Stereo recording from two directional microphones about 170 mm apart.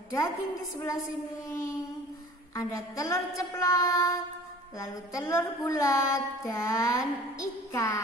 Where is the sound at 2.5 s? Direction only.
20° left (ahead or behind).